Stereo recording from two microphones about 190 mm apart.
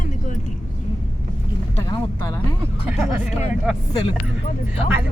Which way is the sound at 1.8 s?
20° left (ahead or behind).